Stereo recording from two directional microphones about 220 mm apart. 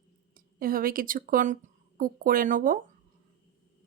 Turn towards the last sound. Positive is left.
turn(degrees=-40)  # may be behind; listen again after turning